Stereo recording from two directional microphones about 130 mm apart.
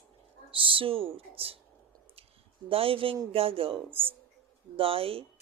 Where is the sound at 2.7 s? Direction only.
45° right (ahead or behind).